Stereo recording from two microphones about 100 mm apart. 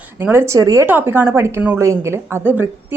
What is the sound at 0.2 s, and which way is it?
Speech, 25° right (ahead or behind).